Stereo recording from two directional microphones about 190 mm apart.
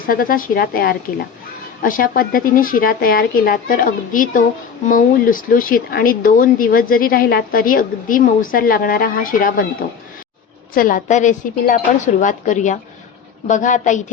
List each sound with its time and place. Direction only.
0.0 s speech: 50° left (ahead or behind)
10.8 s speech: 45° left (ahead or behind)